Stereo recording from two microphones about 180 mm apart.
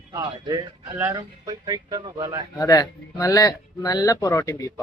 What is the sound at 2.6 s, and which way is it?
Speech, 20° left (ahead or behind).